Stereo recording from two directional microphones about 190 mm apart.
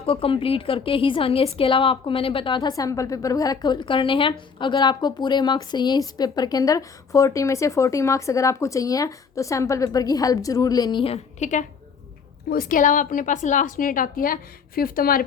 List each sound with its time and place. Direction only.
0.0 s a woman's voice: 30° left (ahead or behind)
12.5 s a woman's voice: 50° left (ahead or behind)